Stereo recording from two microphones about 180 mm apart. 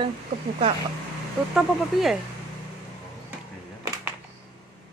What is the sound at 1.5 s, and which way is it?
Speech, centre (ahead or behind).